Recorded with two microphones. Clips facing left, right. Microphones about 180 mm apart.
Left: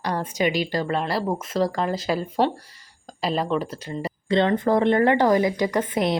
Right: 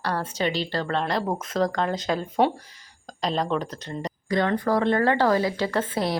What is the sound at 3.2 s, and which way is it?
Speech, 5° left (ahead or behind).